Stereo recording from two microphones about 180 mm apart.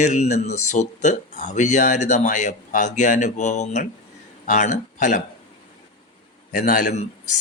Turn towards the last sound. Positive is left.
turn(degrees=45)  # may be behind; listen again after turning